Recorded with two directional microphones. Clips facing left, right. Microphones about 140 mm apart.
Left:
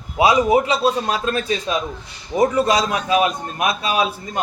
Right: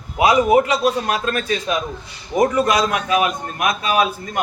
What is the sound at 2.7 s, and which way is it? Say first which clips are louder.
A man's voice: even; 30° left (ahead or behind).